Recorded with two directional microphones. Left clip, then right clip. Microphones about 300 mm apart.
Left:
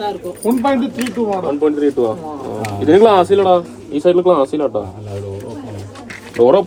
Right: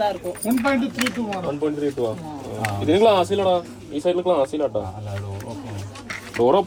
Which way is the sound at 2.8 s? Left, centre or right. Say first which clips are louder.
Left 7 dB; left.